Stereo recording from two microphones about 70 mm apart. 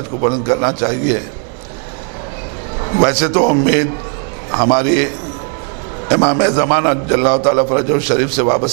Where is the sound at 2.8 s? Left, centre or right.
Right.